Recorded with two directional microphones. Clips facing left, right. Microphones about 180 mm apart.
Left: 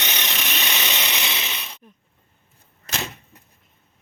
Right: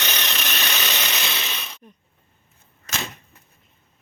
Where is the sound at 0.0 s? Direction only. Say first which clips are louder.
Even; 20° left (ahead or behind).